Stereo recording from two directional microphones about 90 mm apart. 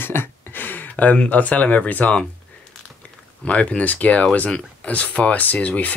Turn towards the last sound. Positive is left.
turn(degrees=15)  # may be behind; listen again after turning